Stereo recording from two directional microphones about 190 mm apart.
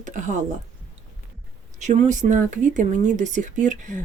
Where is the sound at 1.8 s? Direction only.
40° right (ahead or behind).